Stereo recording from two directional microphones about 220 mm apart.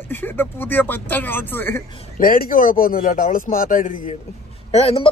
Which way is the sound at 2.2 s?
40° left (ahead or behind).